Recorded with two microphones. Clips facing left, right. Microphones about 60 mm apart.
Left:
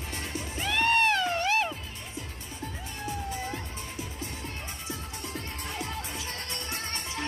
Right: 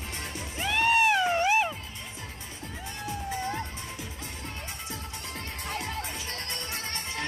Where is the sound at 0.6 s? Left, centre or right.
Centre.